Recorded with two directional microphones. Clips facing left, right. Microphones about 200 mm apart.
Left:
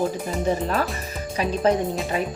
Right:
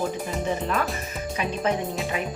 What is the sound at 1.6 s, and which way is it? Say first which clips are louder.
Speech: left 6 dB; 35° left (ahead or behind).